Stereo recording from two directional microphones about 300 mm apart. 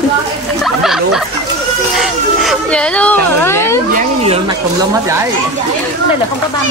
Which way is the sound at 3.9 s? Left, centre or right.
Centre.